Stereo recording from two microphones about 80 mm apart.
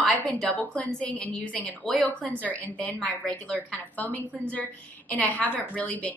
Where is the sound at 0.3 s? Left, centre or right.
Centre.